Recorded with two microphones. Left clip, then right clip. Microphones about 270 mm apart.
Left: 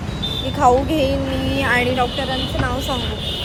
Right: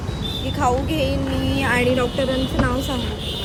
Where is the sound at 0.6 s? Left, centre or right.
Centre.